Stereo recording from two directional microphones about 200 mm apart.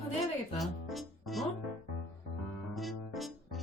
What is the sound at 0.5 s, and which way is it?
Music, centre (ahead or behind).